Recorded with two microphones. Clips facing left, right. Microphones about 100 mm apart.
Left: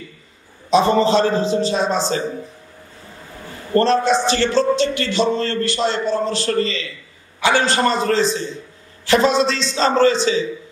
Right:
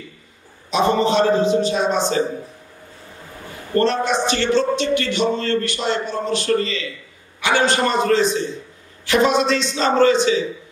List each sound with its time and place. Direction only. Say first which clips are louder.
0.7 s speech: left 3 dB; 35° left (ahead or behind)
3.7 s speech: left 3 dB; 30° left (ahead or behind)